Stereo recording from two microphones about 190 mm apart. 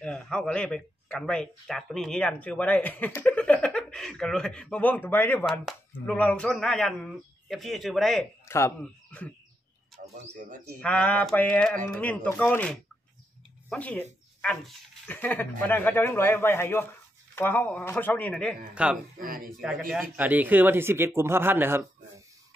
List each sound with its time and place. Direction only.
0.0 s speech: 5° left (ahead or behind)
8.5 s speech: 15° left (ahead or behind)
10.3 s speech: 45° right (ahead or behind)
10.8 s a man's voice: 5° left (ahead or behind)
19.2 s speech: 50° right (ahead or behind)
19.6 s a man's voice: centre (ahead or behind)